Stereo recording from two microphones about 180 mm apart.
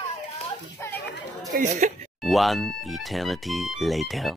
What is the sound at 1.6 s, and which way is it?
Speech, 45° right (ahead or behind).